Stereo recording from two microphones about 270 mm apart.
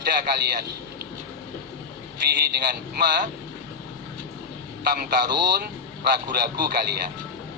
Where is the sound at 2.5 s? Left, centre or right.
Right.